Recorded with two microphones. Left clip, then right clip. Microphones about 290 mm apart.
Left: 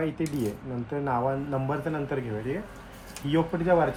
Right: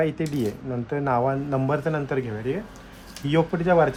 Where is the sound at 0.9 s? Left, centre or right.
Right.